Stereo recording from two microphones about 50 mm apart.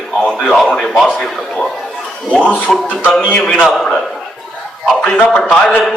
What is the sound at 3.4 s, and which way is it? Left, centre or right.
Speech, centre.